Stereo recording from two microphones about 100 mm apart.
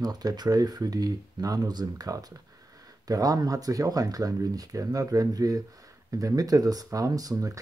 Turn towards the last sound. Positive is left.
turn(degrees=-35)  # may be behind; listen again after turning